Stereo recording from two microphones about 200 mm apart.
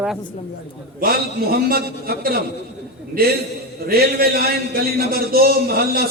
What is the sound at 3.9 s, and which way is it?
A man's voice, 50° right (ahead or behind).